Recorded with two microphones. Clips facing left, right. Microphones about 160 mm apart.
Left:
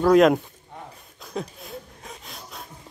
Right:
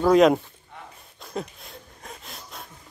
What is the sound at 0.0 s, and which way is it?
Speech, centre (ahead or behind).